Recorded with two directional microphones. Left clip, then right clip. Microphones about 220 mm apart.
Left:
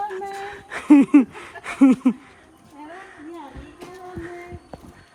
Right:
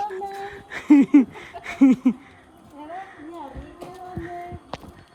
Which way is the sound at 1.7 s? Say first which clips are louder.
Left 1 dB; 5° left (ahead or behind).